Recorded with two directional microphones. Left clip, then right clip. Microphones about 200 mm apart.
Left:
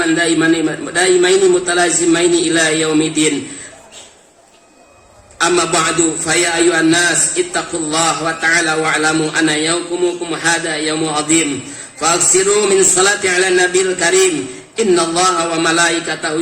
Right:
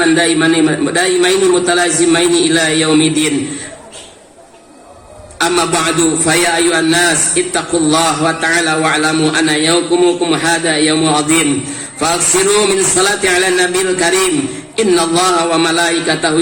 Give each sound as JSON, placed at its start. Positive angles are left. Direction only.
{"t": 0.0, "sound": "a man's voice", "side_deg": -35}
{"t": 5.4, "sound": "a man's voice", "side_deg": -35}